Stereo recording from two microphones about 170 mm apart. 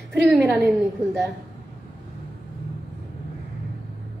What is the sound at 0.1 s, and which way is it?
Speech, 5° right (ahead or behind).